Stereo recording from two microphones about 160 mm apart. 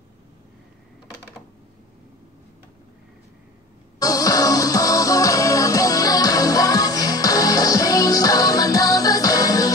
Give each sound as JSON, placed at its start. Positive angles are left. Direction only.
{"t": 4.0, "sound": "music", "side_deg": 20}